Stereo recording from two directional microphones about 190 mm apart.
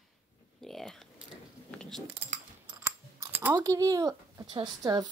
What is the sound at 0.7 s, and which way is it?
Typing, centre (ahead or behind).